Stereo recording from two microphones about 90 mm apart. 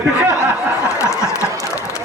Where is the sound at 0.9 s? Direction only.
35° left (ahead or behind).